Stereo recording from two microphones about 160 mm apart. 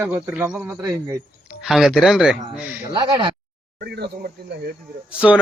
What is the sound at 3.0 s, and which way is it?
Speech, 30° right (ahead or behind).